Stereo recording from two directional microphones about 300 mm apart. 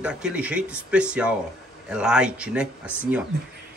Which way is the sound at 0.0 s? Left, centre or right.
Centre.